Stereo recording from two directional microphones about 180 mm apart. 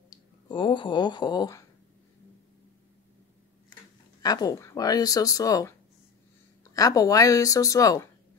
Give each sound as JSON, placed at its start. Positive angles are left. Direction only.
{"t": 0.1, "sound": "speech", "side_deg": 25}
{"t": 4.2, "sound": "speech", "side_deg": 20}